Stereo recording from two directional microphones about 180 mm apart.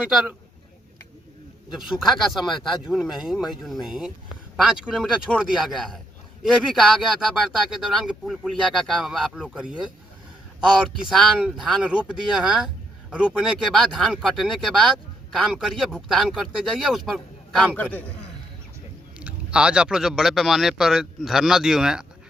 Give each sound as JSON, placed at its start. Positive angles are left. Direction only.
{"t": 1.7, "sound": "speech", "side_deg": 0}
{"t": 2.4, "sound": "speech", "side_deg": 25}
{"t": 2.8, "sound": "speech", "side_deg": 0}
{"t": 11.1, "sound": "speech", "side_deg": 0}
{"t": 19.2, "sound": "speech", "side_deg": -5}